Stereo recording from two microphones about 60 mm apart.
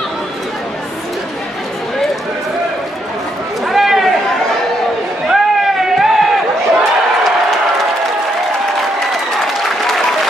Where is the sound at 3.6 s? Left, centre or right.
Centre.